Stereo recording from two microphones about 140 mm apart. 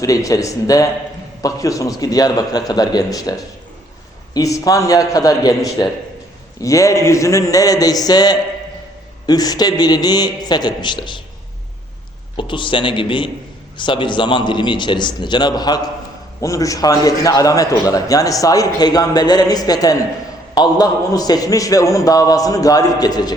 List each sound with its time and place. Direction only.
0.0 s a man's voice: 25° left (ahead or behind)
4.4 s a man's voice: 25° left (ahead or behind)
12.4 s a man's voice: 35° left (ahead or behind)